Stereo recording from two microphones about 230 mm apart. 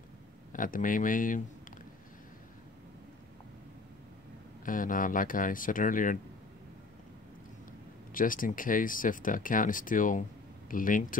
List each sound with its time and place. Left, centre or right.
0.5 s speech: left
4.6 s speech: left
8.1 s speech: left